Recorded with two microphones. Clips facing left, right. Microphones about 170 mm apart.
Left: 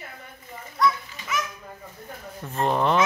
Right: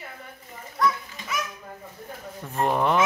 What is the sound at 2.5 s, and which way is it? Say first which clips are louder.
Speech: even; 10° right (ahead or behind).